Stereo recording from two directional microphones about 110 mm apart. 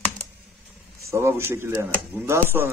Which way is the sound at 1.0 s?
25° right (ahead or behind).